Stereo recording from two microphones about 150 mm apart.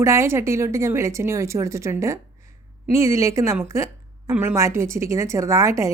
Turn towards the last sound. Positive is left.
turn(degrees=-20)  # may be behind; listen again after turning